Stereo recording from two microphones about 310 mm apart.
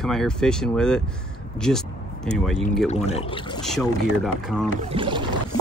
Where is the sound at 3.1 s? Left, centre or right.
Centre.